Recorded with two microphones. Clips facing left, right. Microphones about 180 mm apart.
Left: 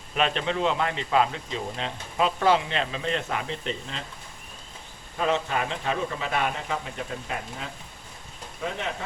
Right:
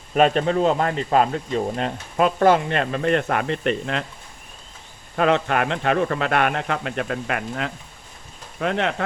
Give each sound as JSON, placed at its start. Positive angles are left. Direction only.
{"t": 0.1, "sound": "speech", "side_deg": -45}
{"t": 5.1, "sound": "speech", "side_deg": -65}